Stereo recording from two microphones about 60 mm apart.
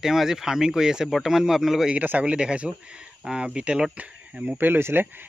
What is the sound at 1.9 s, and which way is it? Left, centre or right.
Speech, right.